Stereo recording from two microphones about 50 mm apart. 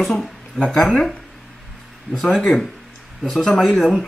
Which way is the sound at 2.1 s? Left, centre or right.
Centre.